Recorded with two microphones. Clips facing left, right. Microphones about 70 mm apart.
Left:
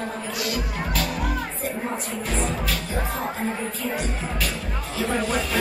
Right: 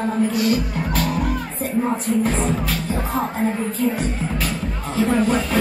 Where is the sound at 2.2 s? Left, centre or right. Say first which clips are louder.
Right 5 dB; right.